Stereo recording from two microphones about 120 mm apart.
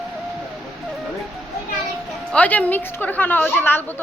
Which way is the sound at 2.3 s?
10° left (ahead or behind).